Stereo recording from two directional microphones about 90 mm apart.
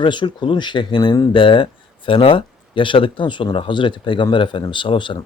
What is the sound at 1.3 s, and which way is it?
Speech, 70° left (ahead or behind).